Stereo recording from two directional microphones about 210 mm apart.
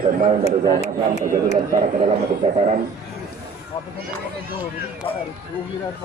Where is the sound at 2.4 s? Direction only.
25° right (ahead or behind).